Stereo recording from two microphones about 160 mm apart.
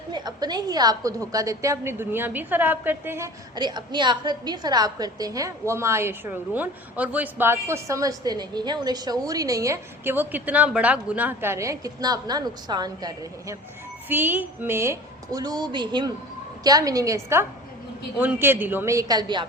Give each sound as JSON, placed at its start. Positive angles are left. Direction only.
{"t": 0.1, "sound": "a woman's voice", "side_deg": -25}
{"t": 3.5, "sound": "a woman's voice", "side_deg": -25}
{"t": 14.1, "sound": "a woman's voice", "side_deg": -10}